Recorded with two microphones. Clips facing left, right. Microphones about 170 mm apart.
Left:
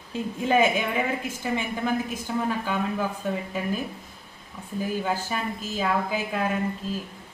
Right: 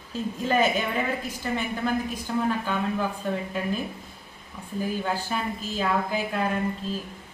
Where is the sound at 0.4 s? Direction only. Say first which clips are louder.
Left 2 dB; 10° left (ahead or behind).